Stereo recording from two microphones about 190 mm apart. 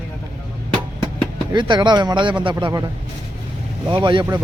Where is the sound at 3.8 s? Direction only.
25° right (ahead or behind).